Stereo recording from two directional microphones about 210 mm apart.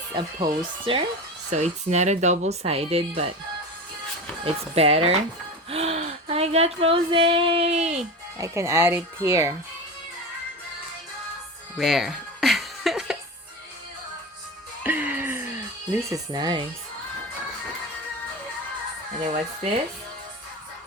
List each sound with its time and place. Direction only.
0.1 s speech: 25° right (ahead or behind)
4.7 s speech: 30° right (ahead or behind)
8.4 s speech: 15° right (ahead or behind)
11.8 s music: centre (ahead or behind)
14.8 s music: 10° right (ahead or behind)
15.9 s speech: 15° right (ahead or behind)